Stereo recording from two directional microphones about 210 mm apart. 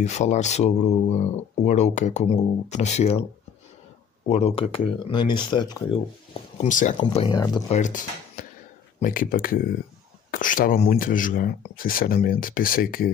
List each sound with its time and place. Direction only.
0.0 s speech: 35° left (ahead or behind)
4.3 s speech: 30° left (ahead or behind)
6.6 s speech: 35° left (ahead or behind)
7.0 s speech: 25° left (ahead or behind)
7.7 s speech: 35° left (ahead or behind)